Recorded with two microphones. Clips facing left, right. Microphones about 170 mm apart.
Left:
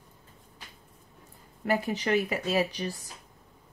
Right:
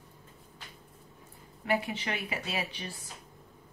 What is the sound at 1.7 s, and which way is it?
Speech, 40° left (ahead or behind).